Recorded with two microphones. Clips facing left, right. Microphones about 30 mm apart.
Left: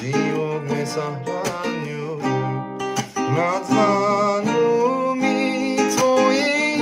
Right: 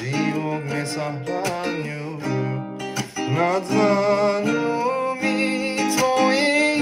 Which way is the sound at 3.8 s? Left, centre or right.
Right.